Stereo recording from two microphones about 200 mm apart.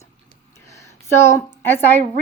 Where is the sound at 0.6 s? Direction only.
15° left (ahead or behind).